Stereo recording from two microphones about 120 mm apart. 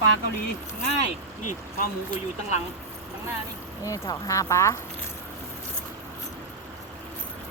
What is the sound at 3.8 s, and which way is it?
Speech, 25° left (ahead or behind).